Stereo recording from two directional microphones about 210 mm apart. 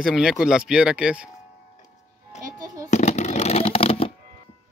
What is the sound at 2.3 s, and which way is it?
Music, 35° left (ahead or behind).